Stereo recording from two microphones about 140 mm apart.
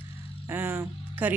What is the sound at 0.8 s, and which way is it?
Music, 10° right (ahead or behind).